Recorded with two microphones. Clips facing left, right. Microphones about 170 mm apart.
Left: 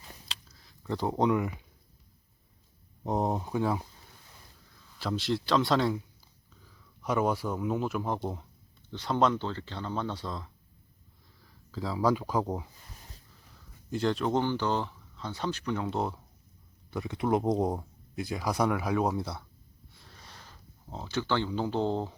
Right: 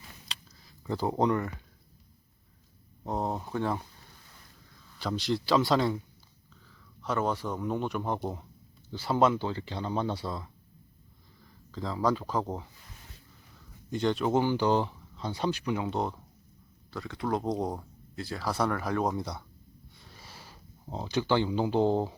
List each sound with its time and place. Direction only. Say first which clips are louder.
0.3 s a sound: even; centre (ahead or behind)
3.0 s speech: left 3 dB; 20° left (ahead or behind); by 6.0 s centre (ahead or behind)
6.7 s speech: left 1 dB; 10° left (ahead or behind); by 10.5 s 5° right (ahead or behind)
11.7 s speech: left 1 dB; 5° left (ahead or behind)
13.9 s speech: right 1 dB; centre (ahead or behind)
16.9 s speech: left 3 dB; 20° left (ahead or behind); by 19.5 s 5° left (ahead or behind)
20.0 s a sound: right 1 dB; 5° right (ahead or behind)